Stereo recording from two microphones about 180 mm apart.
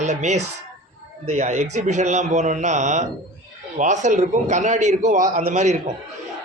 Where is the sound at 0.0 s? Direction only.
40° right (ahead or behind).